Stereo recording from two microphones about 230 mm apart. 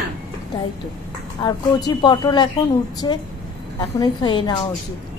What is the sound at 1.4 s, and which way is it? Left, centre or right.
Speech, centre.